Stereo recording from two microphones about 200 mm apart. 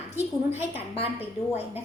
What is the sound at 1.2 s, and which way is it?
Speech, 10° right (ahead or behind).